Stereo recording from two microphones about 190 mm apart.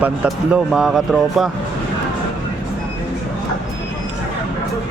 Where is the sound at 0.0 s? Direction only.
5° right (ahead or behind).